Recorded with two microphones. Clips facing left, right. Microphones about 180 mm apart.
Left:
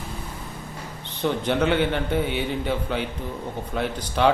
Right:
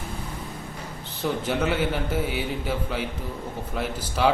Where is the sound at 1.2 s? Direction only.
5° right (ahead or behind).